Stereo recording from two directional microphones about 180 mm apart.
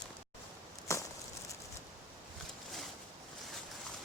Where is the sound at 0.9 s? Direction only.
15° left (ahead or behind).